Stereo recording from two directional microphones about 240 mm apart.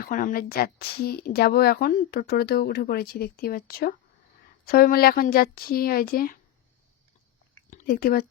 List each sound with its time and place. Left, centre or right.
0.0 s speech: left
7.7 s speech: left